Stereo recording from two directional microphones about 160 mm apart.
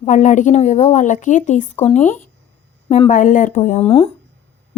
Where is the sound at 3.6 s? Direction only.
40° left (ahead or behind).